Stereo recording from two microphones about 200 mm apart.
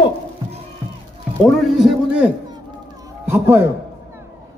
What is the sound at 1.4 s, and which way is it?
Speech, centre (ahead or behind).